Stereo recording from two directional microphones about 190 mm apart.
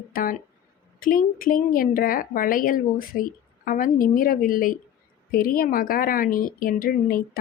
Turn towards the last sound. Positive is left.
turn(degrees=50)  # may be behind; listen again after turning